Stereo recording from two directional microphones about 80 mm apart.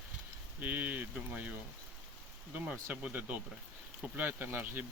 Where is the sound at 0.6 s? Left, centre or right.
Right.